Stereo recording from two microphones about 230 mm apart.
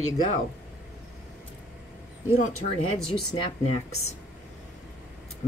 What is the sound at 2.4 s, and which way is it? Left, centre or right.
Speech, left.